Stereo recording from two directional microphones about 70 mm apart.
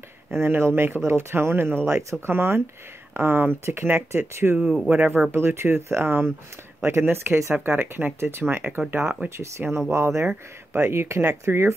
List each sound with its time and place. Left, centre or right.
0.3 s speech: right
4.8 s speech: right
5.3 s speech: right